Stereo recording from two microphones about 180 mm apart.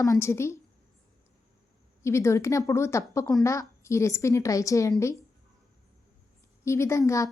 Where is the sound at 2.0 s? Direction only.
15° left (ahead or behind).